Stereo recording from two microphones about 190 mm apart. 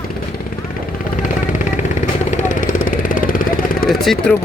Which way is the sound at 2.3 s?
45° left (ahead or behind).